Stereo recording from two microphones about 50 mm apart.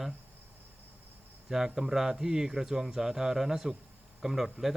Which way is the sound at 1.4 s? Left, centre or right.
Centre.